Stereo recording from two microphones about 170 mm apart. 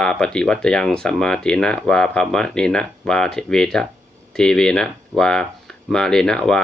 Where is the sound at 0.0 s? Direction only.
5° left (ahead or behind).